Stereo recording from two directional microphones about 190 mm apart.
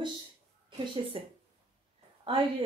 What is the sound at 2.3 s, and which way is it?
Speech, 25° right (ahead or behind).